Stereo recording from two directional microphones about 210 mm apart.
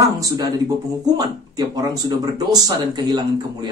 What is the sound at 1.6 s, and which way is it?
Speech, 20° right (ahead or behind).